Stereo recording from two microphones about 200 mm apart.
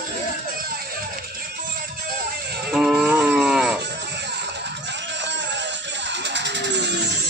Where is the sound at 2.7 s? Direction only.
5° right (ahead or behind).